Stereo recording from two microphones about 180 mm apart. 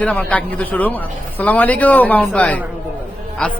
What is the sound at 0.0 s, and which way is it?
Speech, 10° left (ahead or behind).